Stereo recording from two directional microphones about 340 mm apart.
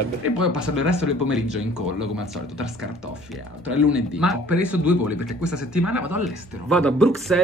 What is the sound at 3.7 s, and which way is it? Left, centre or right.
Speech, centre.